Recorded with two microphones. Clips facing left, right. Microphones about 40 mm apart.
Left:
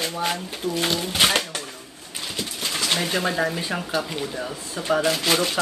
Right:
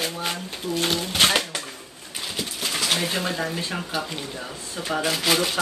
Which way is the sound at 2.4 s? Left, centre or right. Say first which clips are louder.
Even; centre.